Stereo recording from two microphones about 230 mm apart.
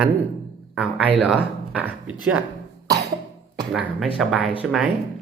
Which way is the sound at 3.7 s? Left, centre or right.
Centre.